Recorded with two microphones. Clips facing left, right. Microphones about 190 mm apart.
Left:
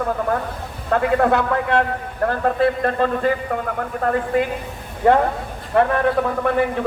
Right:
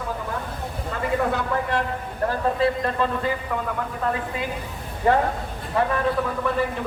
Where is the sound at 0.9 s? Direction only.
65° left (ahead or behind).